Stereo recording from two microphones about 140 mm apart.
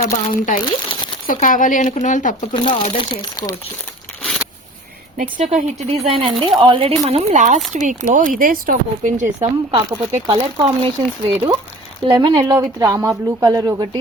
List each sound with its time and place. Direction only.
0.0 s speech: 70° left (ahead or behind)
2.5 s speech: 35° left (ahead or behind)
4.2 s a sound: 5° left (ahead or behind)
5.1 s speech: 75° right (ahead or behind)
5.5 s speech: 45° right (ahead or behind); by 9.5 s 65° right (ahead or behind)
9.7 s speech: 40° right (ahead or behind)
12.0 s speech: 30° right (ahead or behind)